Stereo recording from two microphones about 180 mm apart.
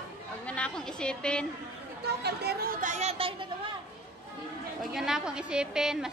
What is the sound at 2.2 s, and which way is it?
Speech, 65° right (ahead or behind).